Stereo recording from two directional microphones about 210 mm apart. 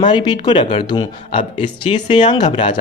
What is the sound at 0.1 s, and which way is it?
Speech, 20° left (ahead or behind).